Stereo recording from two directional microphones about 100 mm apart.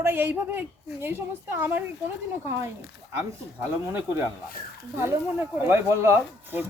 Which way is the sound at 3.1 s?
25° right (ahead or behind).